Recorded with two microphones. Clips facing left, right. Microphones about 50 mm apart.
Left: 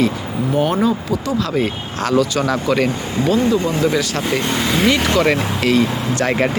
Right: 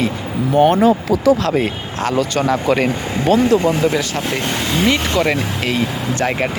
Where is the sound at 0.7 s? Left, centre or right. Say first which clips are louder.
Right 4 dB; right.